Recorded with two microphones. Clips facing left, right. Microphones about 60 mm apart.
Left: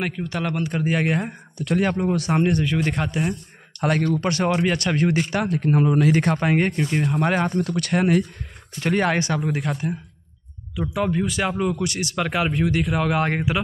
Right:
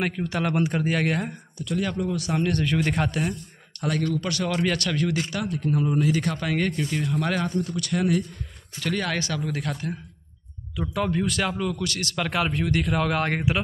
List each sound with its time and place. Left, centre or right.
0.0 s speech: centre
0.5 s speech: centre
0.8 s speech: centre
1.6 s speech: left
2.5 s speech: centre
3.8 s speech: left
6.1 s speech: left
7.5 s speech: left
8.7 s speech: left
10.8 s speech: centre
11.6 s speech: left